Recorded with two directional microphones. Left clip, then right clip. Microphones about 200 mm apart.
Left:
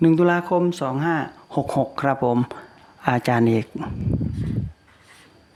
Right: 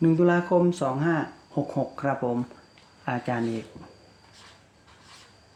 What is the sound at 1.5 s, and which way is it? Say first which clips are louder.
Speech: left 7 dB; 50° left (ahead or behind).